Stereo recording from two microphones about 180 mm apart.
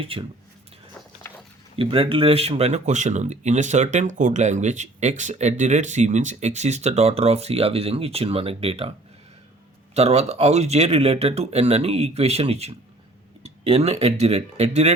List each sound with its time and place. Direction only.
0.0 s speech: 30° right (ahead or behind)
1.2 s a sound: 15° left (ahead or behind)
1.8 s speech: 30° right (ahead or behind)
9.9 s speech: 35° right (ahead or behind)